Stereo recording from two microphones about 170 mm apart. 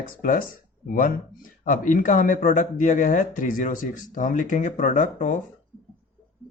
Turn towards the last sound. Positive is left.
turn(degrees=45)  # may be behind; listen again after turning